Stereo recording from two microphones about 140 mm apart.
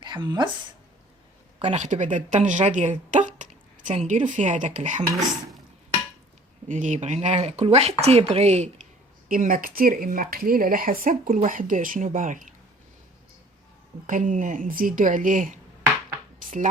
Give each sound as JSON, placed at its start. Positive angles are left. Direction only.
{"t": 0.0, "sound": "speech", "side_deg": -30}
{"t": 1.5, "sound": "speech", "side_deg": -55}
{"t": 6.7, "sound": "speech", "side_deg": -65}
{"t": 9.3, "sound": "a woman's voice", "side_deg": -80}
{"t": 14.1, "sound": "a woman's voice", "side_deg": -65}